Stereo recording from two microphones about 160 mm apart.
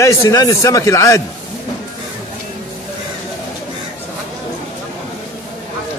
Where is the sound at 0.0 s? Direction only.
20° left (ahead or behind).